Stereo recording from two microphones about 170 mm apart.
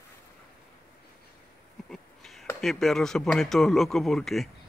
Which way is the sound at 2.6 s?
Centre (ahead or behind).